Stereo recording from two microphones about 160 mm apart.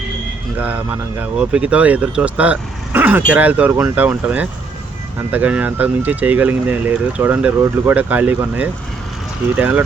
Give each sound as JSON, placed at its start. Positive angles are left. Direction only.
{"t": 1.2, "sound": "speech", "side_deg": -10}